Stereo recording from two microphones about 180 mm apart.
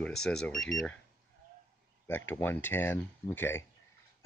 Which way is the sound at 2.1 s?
10° left (ahead or behind).